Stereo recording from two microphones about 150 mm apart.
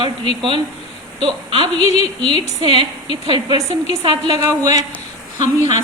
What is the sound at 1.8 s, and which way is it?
Speech, 40° left (ahead or behind).